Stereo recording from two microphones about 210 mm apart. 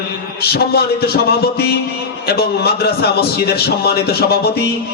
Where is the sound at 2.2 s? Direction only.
50° left (ahead or behind).